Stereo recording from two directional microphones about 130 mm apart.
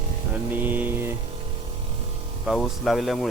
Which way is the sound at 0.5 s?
15° right (ahead or behind).